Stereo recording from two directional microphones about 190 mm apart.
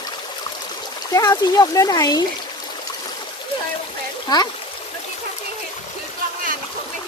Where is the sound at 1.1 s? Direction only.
20° left (ahead or behind).